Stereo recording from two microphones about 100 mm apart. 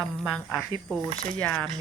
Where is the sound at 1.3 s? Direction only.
15° left (ahead or behind).